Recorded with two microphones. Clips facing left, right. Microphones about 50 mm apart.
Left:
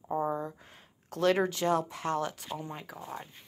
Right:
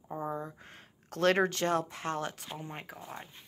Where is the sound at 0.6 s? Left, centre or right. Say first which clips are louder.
Right 2 dB; right.